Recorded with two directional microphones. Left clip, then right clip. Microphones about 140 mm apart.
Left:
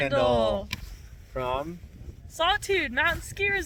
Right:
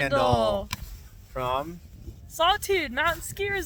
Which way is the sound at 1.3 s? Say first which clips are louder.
Right 1 dB; 20° left (ahead or behind).